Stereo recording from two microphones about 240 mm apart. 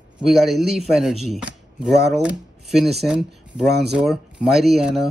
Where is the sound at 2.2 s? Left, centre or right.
Centre.